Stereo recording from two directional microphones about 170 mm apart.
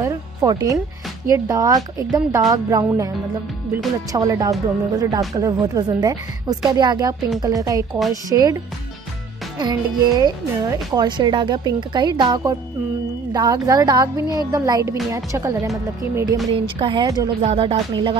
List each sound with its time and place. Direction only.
0.0 s speech: 20° right (ahead or behind)
4.1 s speech: 20° right (ahead or behind)
9.6 s speech: 25° right (ahead or behind)
16.5 s speech: 30° right (ahead or behind)
17.0 s speech: 20° right (ahead or behind)
17.4 s speech: 35° right (ahead or behind)